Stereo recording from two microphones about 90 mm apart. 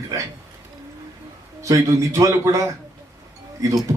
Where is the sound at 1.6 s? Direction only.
40° right (ahead or behind).